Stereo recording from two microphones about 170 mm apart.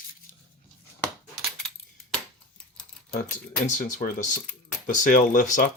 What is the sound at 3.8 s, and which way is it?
Speech, 50° left (ahead or behind).